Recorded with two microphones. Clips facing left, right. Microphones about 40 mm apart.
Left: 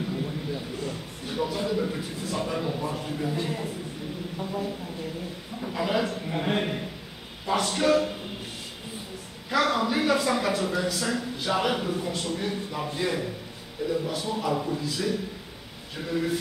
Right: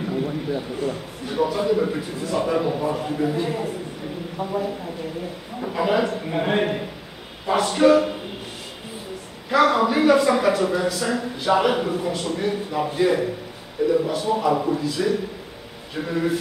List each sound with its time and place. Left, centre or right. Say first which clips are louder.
0.1 s a sound: right 6 dB; right
1.8 s a man's voice: right 6 dB; centre
4.4 s a man's voice: right 7 dB; right
9.5 s a man's voice: right 6 dB; centre
14.5 s speech: right 7 dB; right
14.8 s a man's voice: right 6 dB; centre
15.9 s a man's voice: right 4 dB; centre